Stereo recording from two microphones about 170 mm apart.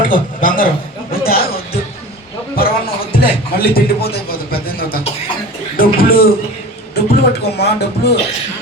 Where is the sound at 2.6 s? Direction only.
60° left (ahead or behind).